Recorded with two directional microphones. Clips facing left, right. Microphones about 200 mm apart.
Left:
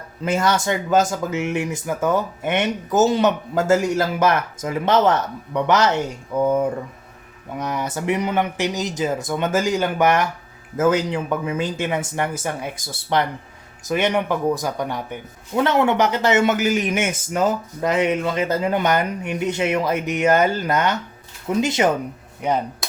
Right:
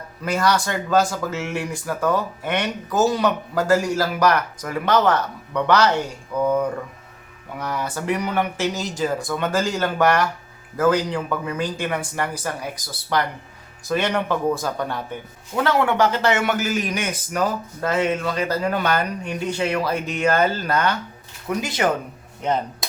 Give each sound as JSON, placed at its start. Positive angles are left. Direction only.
{"t": 0.2, "sound": "speech", "side_deg": 25}
{"t": 22.4, "sound": "speech", "side_deg": 10}